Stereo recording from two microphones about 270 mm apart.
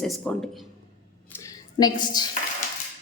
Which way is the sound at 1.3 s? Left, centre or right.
Centre.